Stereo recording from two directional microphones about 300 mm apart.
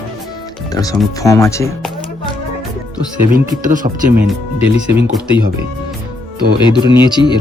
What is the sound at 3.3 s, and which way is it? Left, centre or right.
Speech, right.